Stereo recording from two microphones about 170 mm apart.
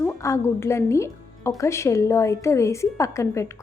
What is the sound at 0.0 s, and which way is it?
A woman's voice, 15° left (ahead or behind).